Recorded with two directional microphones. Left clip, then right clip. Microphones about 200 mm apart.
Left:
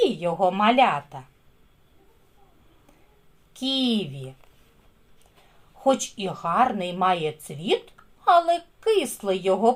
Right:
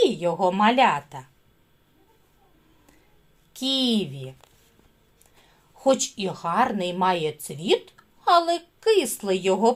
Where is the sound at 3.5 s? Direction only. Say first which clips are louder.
Right 1 dB; 30° right (ahead or behind).